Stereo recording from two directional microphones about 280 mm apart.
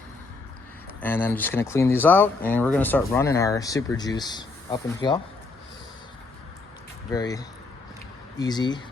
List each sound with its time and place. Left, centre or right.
1.0 s speech: centre
7.1 s speech: centre